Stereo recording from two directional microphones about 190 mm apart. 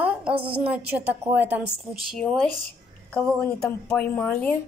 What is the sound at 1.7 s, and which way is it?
Speech, centre (ahead or behind).